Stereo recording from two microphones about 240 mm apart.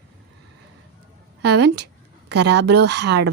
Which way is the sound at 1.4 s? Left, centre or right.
Right.